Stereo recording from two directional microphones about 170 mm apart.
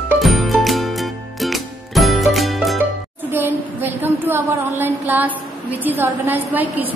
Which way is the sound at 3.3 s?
10° right (ahead or behind).